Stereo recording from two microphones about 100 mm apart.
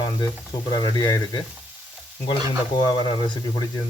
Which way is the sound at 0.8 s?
45° left (ahead or behind).